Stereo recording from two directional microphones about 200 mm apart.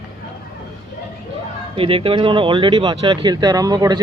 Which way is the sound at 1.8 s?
25° right (ahead or behind).